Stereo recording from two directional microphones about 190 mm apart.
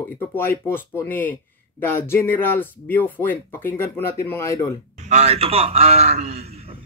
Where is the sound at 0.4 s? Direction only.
10° left (ahead or behind).